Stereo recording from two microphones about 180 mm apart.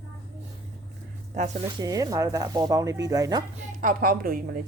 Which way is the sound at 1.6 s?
20° right (ahead or behind).